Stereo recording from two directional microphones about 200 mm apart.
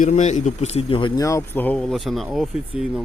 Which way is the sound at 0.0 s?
35° left (ahead or behind).